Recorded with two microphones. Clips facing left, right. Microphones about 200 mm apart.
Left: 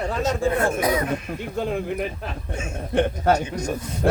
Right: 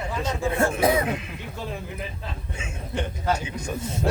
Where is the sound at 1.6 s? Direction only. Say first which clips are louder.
Left 9 dB; 65° left (ahead or behind).